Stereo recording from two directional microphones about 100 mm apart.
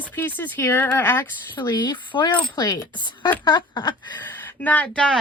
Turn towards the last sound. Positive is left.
turn(degrees=10)  # may be behind; listen again after turning